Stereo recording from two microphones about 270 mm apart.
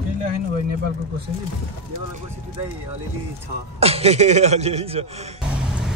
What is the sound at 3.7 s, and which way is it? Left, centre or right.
Speech, right.